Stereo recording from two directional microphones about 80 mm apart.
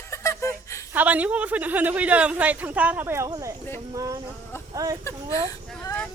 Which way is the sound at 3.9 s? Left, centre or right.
Right.